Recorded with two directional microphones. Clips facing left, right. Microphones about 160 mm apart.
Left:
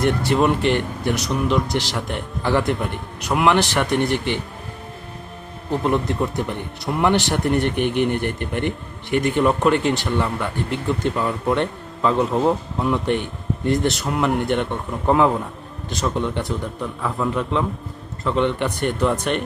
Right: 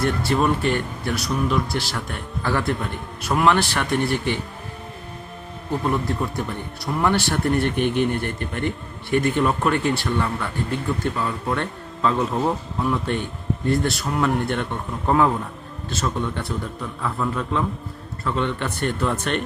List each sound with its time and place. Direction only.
0.0 s speech: 20° left (ahead or behind)
5.7 s speech: 20° left (ahead or behind)